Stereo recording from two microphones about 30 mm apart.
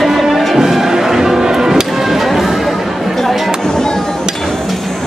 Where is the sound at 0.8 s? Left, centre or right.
Centre.